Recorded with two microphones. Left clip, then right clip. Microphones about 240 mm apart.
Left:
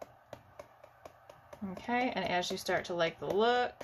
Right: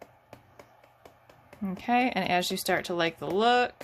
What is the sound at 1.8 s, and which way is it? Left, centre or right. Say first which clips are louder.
Speech: right 7 dB; right.